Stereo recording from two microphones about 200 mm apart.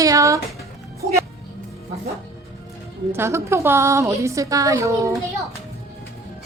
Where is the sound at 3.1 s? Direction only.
15° right (ahead or behind).